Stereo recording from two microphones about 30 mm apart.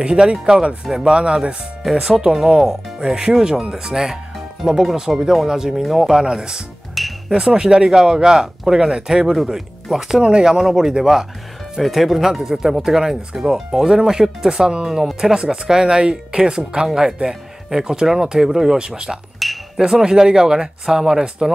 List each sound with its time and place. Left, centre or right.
0.0 s speech: right
2.0 s speech: centre
6.2 s speech: right
7.0 s music: centre
7.3 s speech: right
10.2 s speech: right
10.6 s speech: centre
13.0 s speech: right
13.4 s speech: centre
19.4 s chink: centre
19.8 s speech: centre